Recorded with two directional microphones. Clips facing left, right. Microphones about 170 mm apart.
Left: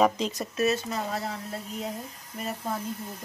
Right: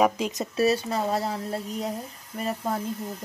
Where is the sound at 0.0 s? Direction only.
10° right (ahead or behind).